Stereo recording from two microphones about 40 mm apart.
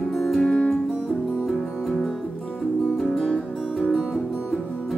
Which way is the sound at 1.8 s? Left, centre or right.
Centre.